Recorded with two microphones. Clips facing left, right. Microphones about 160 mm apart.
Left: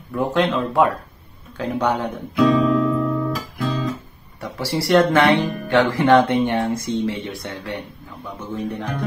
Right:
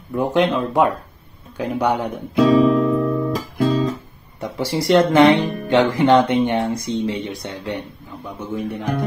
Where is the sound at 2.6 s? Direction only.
25° right (ahead or behind).